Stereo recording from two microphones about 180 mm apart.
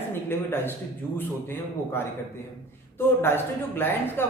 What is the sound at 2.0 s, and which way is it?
Speech, 15° left (ahead or behind).